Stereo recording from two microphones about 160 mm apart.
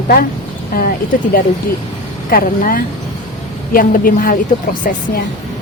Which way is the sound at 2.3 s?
60° left (ahead or behind).